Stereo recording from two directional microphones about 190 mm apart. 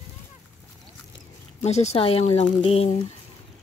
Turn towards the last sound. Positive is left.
turn(degrees=35)  # may be behind; listen again after turning